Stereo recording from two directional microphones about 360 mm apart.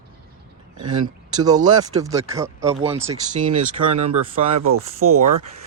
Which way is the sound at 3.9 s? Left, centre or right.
Right.